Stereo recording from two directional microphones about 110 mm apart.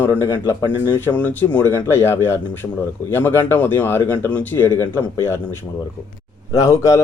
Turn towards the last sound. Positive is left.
turn(degrees=30)  # may be behind; listen again after turning